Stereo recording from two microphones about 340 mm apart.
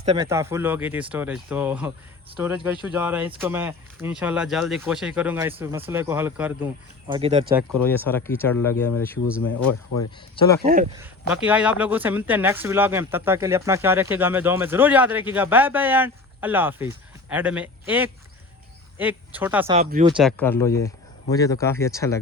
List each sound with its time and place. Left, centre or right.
0.0 s speech: centre
7.1 s speech: centre
7.9 s speech: centre
10.3 s speech: centre
10.9 s speech: centre
19.8 s speech: right
20.1 s speech: centre